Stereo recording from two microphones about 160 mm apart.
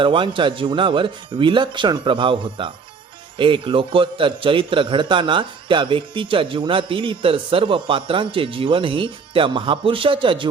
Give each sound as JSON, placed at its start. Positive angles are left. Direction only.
{"t": 0.0, "sound": "a man's voice", "side_deg": -30}